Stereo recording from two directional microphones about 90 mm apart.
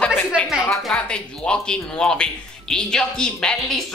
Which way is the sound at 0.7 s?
10° left (ahead or behind).